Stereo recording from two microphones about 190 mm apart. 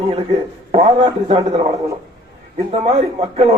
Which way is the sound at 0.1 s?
30° right (ahead or behind).